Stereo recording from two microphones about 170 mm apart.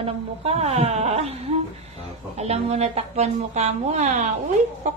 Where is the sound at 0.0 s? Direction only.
35° right (ahead or behind).